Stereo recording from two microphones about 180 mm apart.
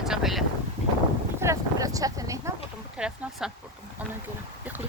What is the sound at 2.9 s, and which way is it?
Speech, 5° right (ahead or behind).